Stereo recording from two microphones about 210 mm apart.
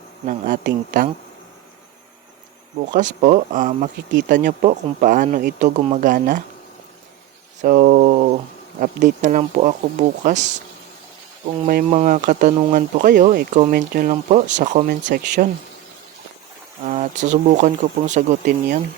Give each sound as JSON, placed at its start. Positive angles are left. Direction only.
{"t": 0.3, "sound": "speech", "side_deg": -40}
{"t": 2.9, "sound": "speech", "side_deg": -35}
{"t": 7.6, "sound": "speech", "side_deg": -40}
{"t": 11.6, "sound": "speech", "side_deg": -40}
{"t": 16.8, "sound": "speech", "side_deg": -35}